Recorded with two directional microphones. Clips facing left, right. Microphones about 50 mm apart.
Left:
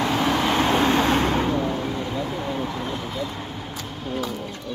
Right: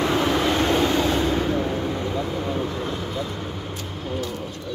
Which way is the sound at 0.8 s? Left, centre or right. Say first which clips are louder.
Left 1 dB; left.